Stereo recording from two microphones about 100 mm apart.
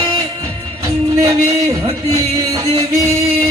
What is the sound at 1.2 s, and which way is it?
Music, 35° right (ahead or behind).